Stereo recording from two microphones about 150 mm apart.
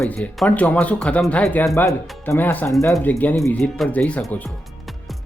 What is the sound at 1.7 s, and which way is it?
Speech, 20° left (ahead or behind).